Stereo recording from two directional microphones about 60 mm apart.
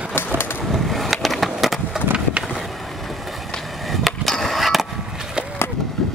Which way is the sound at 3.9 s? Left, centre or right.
Centre.